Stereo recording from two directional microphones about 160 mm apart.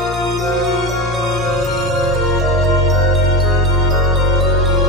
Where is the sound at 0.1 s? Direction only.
Centre (ahead or behind).